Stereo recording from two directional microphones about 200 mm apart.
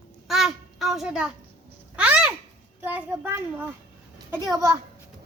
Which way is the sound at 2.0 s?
5° right (ahead or behind).